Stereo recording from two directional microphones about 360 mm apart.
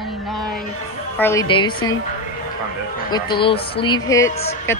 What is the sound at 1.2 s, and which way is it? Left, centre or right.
Speech, centre.